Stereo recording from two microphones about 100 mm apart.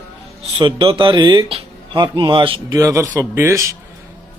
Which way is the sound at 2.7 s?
35° right (ahead or behind).